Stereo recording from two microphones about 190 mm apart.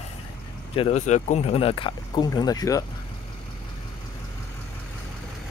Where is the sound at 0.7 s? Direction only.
30° left (ahead or behind).